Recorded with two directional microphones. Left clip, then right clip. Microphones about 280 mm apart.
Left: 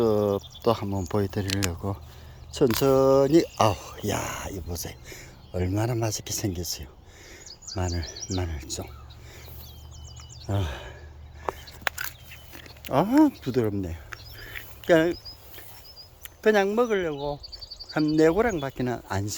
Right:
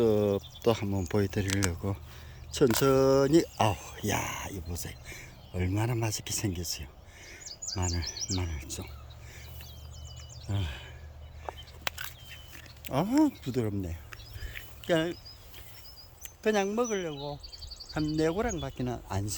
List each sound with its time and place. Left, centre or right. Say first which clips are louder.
0.0 s a sound: left 3 dB; centre
0.6 s speech: left 3 dB; centre
7.4 s bird: right 2 dB; right
7.8 s speech: left 4 dB; centre
10.5 s speech: left 8 dB; centre
11.9 s a sound: left 6 dB; centre
12.8 s speech: left 6 dB; centre
13.4 s a sound: left 7 dB; centre
16.2 s speech: left 7 dB; centre